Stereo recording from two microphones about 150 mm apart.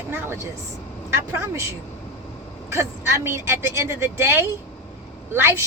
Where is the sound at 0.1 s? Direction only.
15° right (ahead or behind).